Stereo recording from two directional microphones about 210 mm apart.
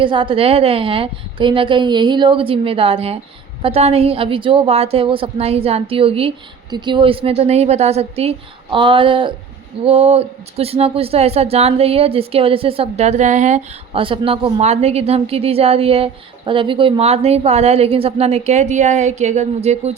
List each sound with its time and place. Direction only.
0.0 s a woman's voice: 25° right (ahead or behind)